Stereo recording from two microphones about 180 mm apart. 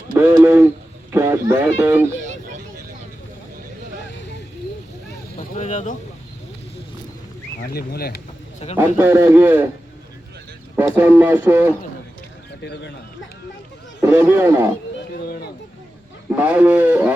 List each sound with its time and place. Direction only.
0.4 s hoot: 15° right (ahead or behind)
1.1 s speech: 15° right (ahead or behind)
2.2 s vehicle: 40° right (ahead or behind)
5.4 s vehicle: 45° left (ahead or behind)
7.6 s speech: 60° left (ahead or behind)
8.5 s a man's voice: 35° left (ahead or behind)
9.0 s speech: 15° right (ahead or behind)
10.8 s speech: 10° right (ahead or behind)
12.6 s speech: 70° left (ahead or behind)
14.0 s speech: 15° right (ahead or behind)
16.3 s speech: 10° right (ahead or behind)